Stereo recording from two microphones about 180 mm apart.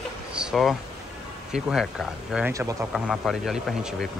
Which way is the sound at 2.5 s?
15° right (ahead or behind).